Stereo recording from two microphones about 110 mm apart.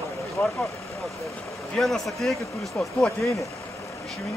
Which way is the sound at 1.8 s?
Centre (ahead or behind).